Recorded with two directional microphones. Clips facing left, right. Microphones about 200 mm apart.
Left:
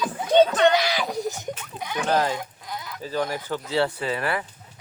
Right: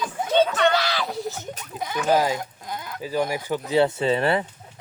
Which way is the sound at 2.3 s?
45° right (ahead or behind).